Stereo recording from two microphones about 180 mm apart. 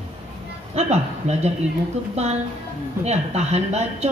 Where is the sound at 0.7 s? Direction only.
35° right (ahead or behind).